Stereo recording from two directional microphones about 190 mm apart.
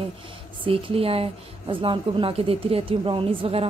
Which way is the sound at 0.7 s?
30° right (ahead or behind).